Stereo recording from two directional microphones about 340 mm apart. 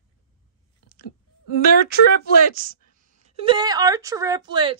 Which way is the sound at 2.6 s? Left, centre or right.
Right.